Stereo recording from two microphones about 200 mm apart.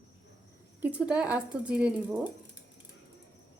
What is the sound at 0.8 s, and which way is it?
Speech, 5° right (ahead or behind).